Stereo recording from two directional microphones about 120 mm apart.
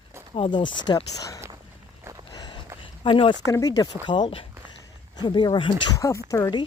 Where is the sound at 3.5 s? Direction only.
30° left (ahead or behind).